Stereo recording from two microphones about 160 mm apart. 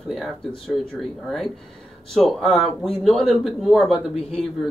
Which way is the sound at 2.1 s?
Centre (ahead or behind).